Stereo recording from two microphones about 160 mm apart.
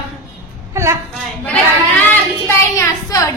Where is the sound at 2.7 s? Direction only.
20° left (ahead or behind).